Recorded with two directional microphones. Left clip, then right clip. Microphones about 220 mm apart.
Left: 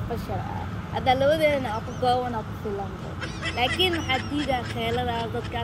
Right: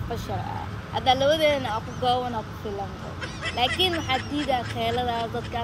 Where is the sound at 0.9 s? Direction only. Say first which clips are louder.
Even; 10° right (ahead or behind).